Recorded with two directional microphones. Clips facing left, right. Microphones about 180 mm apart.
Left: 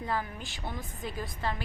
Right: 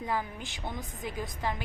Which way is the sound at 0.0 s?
15° right (ahead or behind).